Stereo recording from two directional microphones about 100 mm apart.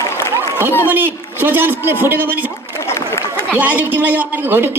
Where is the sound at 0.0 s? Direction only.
25° left (ahead or behind).